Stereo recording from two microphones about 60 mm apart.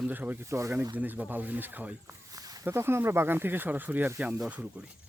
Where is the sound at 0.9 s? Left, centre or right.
Right.